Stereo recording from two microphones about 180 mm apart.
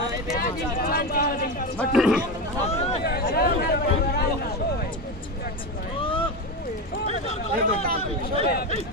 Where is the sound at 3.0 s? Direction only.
60° left (ahead or behind).